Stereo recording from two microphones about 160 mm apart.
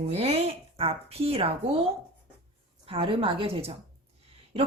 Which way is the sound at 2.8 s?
35° right (ahead or behind).